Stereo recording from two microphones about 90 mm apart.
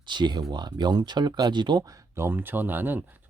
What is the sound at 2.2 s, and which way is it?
Speech, 25° right (ahead or behind).